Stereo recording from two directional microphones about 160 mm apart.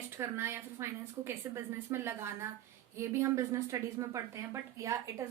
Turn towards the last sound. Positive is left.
turn(degrees=-20)  # may be behind; listen again after turning